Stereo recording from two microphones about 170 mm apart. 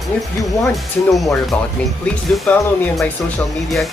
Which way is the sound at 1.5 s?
10° left (ahead or behind).